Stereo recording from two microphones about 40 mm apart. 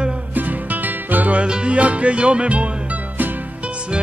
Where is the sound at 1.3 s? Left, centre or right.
Right.